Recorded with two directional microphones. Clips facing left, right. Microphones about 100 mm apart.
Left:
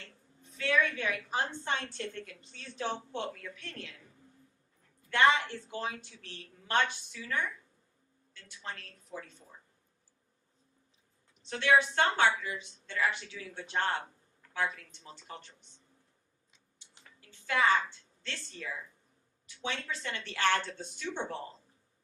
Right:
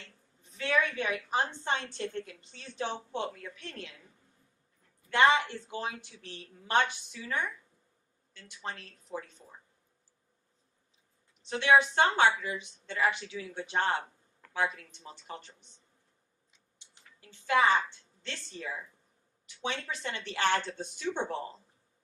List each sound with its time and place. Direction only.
0.5 s a woman's voice: 20° right (ahead or behind)
5.1 s a woman's voice: 20° right (ahead or behind)
11.4 s a woman's voice: 20° right (ahead or behind)
17.2 s a woman's voice: 20° right (ahead or behind)